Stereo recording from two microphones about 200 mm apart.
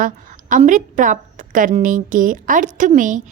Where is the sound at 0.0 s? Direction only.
40° right (ahead or behind).